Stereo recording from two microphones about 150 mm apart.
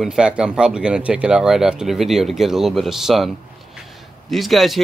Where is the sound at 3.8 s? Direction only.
Centre (ahead or behind).